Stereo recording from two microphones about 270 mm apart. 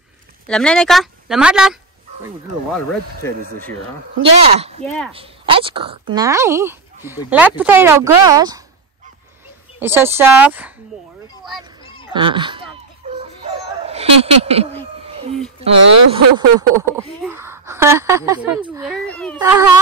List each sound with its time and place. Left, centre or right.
0.5 s a woman's voice: centre
3.3 s speech: centre
4.2 s speech: right
4.8 s a woman's voice: centre
5.1 s speech: centre
9.8 s speech: centre
11.8 s children playing: centre
12.1 s speech: centre
13.1 s dog: right
15.0 s a sound: right
16.1 s speech: centre
17.2 s a sound: centre
19.0 s a sound: centre
19.3 s speech: centre